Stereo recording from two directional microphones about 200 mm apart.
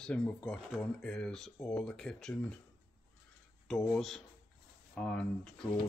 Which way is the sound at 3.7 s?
5° left (ahead or behind).